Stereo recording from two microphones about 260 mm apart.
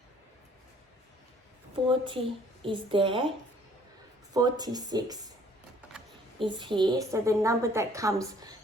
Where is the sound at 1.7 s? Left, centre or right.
Centre.